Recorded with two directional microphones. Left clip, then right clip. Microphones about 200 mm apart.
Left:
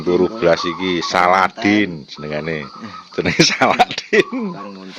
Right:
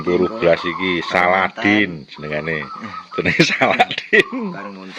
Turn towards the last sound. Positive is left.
turn(degrees=15)  # may be behind; listen again after turning